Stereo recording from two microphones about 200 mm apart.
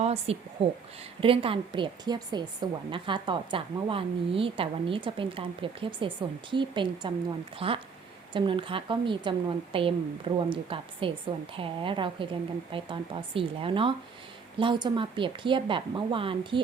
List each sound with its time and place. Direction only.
0.0 s a woman's voice: 30° right (ahead or behind)